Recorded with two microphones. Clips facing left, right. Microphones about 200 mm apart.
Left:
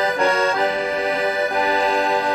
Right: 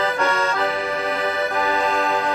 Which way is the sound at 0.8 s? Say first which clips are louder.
Left 2 dB; 15° left (ahead or behind).